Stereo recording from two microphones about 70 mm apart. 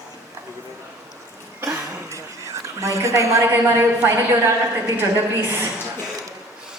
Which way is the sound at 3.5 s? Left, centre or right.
Right.